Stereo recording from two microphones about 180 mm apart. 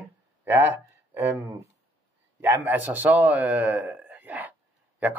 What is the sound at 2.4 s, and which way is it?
Speech, 10° right (ahead or behind).